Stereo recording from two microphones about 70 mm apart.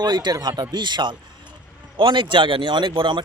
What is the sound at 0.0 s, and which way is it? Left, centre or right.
Speech, right.